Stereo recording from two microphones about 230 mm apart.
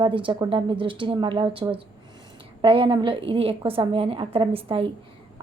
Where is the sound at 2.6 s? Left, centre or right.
Right.